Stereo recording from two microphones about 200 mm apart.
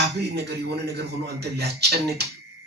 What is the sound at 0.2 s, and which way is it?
Speech, 55° right (ahead or behind).